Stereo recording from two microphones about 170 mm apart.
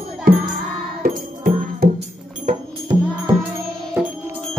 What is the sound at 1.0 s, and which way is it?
Music, 55° right (ahead or behind).